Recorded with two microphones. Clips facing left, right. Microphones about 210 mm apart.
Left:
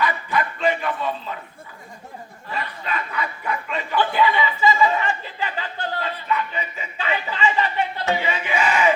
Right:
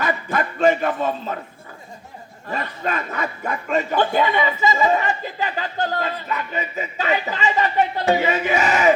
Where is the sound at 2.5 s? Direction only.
45° right (ahead or behind).